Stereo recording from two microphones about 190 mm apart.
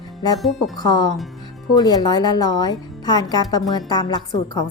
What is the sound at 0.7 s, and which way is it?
Speech, 20° left (ahead or behind).